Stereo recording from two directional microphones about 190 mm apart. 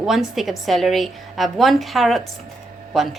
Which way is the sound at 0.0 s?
Centre (ahead or behind).